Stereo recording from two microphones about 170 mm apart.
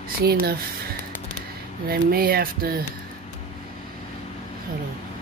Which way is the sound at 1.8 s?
60° right (ahead or behind).